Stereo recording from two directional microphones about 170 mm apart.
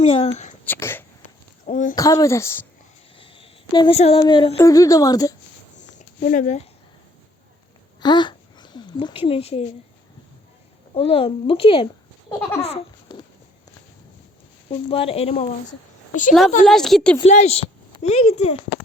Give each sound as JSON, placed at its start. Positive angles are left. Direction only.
{"t": 0.0, "sound": "speech", "side_deg": 35}
{"t": 0.6, "sound": "speech", "side_deg": 10}
{"t": 1.6, "sound": "speech", "side_deg": 50}
{"t": 2.0, "sound": "speech", "side_deg": 20}
{"t": 3.2, "sound": "a sound", "side_deg": 30}
{"t": 3.9, "sound": "a woman's voice", "side_deg": 35}
{"t": 6.0, "sound": "speech", "side_deg": 50}
{"t": 8.0, "sound": "speech", "side_deg": 25}
{"t": 10.9, "sound": "speech", "side_deg": 35}
{"t": 12.4, "sound": "speech", "side_deg": 10}
{"t": 12.6, "sound": "a sound", "side_deg": 30}
{"t": 14.7, "sound": "speech", "side_deg": 30}
{"t": 16.6, "sound": "a woman's voice", "side_deg": 0}
{"t": 17.2, "sound": "a woman's voice", "side_deg": 40}